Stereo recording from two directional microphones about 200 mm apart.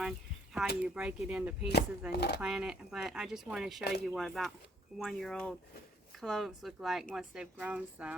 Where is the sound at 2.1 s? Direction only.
55° left (ahead or behind).